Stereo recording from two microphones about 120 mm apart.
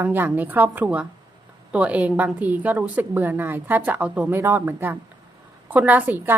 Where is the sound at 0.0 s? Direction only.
15° right (ahead or behind).